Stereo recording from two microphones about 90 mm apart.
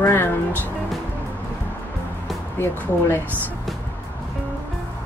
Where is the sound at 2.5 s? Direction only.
25° left (ahead or behind).